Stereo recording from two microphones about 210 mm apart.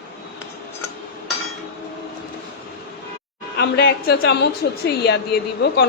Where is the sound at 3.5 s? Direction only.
50° left (ahead or behind).